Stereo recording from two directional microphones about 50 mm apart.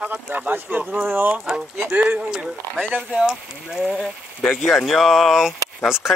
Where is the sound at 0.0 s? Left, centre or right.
Right.